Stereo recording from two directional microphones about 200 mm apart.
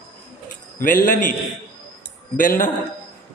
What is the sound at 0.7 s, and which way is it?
Speech, 45° left (ahead or behind).